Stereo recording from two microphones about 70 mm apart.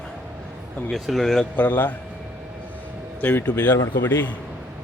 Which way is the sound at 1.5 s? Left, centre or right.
Left.